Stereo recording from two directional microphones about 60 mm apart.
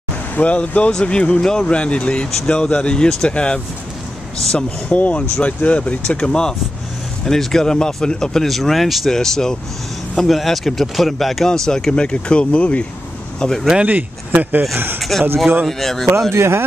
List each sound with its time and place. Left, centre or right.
0.4 s speech: left
4.6 s speech: left
13.4 s speech: centre
13.7 s speech: right
15.0 s speech: centre
16.3 s speech: right